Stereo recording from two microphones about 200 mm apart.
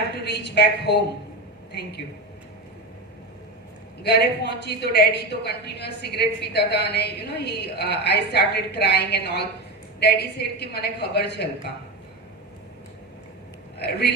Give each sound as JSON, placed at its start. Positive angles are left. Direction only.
{"t": 0.3, "sound": "a woman's voice", "side_deg": 60}
{"t": 4.0, "sound": "a woman's voice", "side_deg": 55}
{"t": 13.7, "sound": "a man's voice", "side_deg": 55}